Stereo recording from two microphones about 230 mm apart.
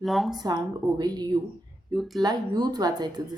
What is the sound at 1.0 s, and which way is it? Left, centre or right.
Speech, centre.